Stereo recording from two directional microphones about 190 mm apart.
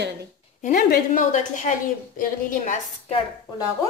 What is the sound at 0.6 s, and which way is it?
A woman's voice, 45° left (ahead or behind).